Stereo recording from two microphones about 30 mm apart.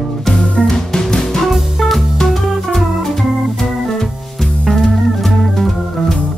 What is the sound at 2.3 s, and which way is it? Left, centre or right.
Organ, centre.